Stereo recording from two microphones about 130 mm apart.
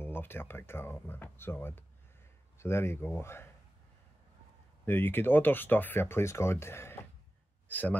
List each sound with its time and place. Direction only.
0.0 s speech: 15° left (ahead or behind)
4.8 s a man's voice: 15° left (ahead or behind)